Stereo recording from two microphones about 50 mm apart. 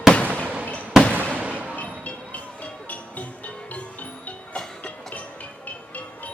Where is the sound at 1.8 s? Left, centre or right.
Left.